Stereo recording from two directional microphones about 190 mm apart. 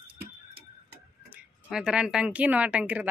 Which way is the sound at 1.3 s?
5° right (ahead or behind).